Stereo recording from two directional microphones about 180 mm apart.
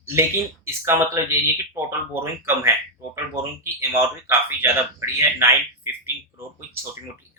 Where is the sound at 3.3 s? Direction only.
15° right (ahead or behind).